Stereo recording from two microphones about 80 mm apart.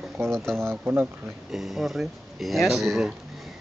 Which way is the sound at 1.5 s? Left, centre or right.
Centre.